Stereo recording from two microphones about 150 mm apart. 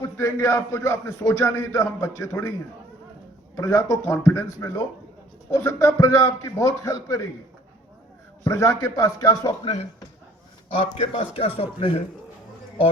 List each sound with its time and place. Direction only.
0.0 s speech: 20° left (ahead or behind)
3.5 s speech: 20° left (ahead or behind)
8.4 s a man's voice: 20° left (ahead or behind); by 12.0 s 40° left (ahead or behind)